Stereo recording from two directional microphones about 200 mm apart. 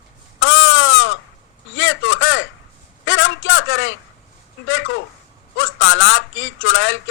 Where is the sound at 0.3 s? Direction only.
85° left.